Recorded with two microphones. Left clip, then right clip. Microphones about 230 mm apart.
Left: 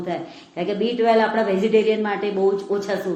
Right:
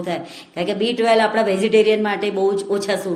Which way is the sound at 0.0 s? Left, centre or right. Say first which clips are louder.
Right 2 dB; right.